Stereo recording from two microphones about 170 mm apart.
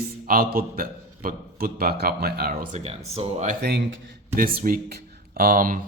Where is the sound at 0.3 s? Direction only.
60° right (ahead or behind).